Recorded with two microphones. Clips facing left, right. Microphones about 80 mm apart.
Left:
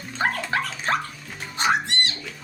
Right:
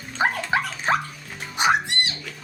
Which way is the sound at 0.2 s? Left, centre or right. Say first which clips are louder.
Right 2 dB; centre.